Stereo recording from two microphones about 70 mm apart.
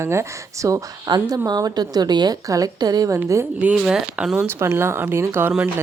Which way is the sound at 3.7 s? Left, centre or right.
Centre.